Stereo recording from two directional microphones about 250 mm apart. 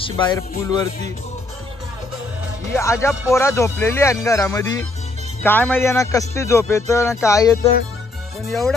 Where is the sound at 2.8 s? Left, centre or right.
Centre.